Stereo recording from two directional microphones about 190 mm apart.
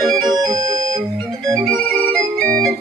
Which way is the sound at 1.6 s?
5° left (ahead or behind).